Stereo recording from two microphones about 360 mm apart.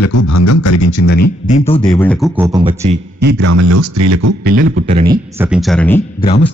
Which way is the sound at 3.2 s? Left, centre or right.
Right.